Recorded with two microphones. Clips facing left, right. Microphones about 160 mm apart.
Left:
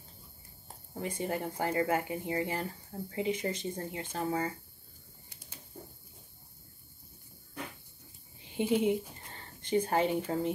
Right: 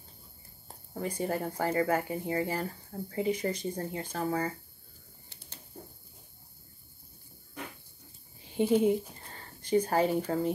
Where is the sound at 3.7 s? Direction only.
35° right (ahead or behind).